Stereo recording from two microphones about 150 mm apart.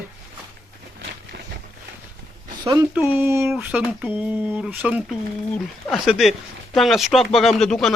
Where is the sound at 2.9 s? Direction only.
15° right (ahead or behind); by 7.9 s centre (ahead or behind).